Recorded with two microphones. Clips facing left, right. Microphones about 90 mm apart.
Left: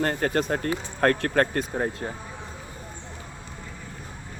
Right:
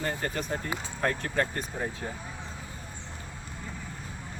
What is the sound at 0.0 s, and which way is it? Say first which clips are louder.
Speech: left 7 dB; 65° left (ahead or behind).